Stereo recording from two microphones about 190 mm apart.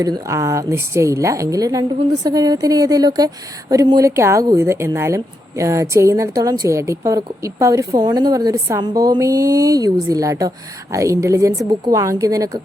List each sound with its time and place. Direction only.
0.0 s a woman's voice: 15° right (ahead or behind)